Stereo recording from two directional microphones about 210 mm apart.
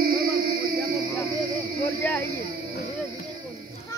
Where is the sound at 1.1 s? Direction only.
10° left (ahead or behind).